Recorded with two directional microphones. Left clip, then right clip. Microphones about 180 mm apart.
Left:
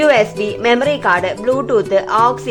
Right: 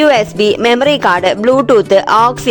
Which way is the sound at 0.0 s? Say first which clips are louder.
Right 3 dB; 50° right (ahead or behind).